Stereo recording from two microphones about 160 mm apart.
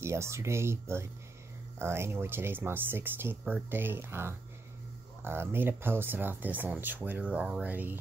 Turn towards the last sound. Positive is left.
turn(degrees=-10)  # may be behind; listen again after turning